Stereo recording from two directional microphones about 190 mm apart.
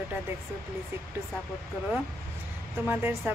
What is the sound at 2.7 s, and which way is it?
Speech, 10° right (ahead or behind).